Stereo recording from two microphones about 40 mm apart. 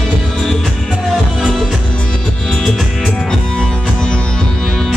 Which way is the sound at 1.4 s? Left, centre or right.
Centre.